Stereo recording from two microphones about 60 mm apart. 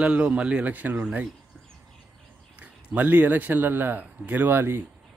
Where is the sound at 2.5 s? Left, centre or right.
Right.